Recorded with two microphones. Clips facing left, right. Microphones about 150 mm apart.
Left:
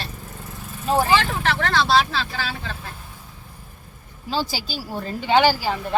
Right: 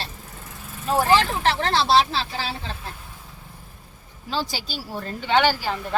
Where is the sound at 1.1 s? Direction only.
30° right (ahead or behind).